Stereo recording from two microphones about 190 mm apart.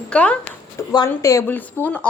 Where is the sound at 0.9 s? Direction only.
20° left (ahead or behind).